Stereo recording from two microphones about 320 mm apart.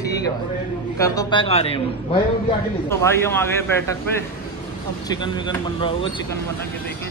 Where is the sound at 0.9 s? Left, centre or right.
Centre.